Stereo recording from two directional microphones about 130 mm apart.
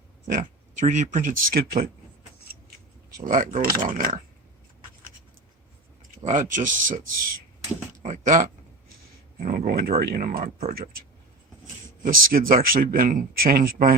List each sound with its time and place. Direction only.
0.3 s speech: 80° right
3.2 s speech: 85° right
6.2 s speech: 75° right (ahead or behind)
8.0 s speech: 75° right (ahead or behind)
9.4 s speech: 90° right
12.0 s speech: 90° right